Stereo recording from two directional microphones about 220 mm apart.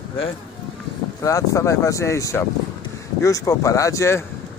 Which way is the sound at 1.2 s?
15° left (ahead or behind).